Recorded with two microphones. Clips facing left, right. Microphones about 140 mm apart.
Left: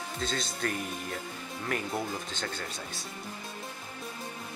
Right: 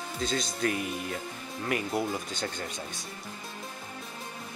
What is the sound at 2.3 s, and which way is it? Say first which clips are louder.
Speech: right 2 dB; 15° right (ahead or behind).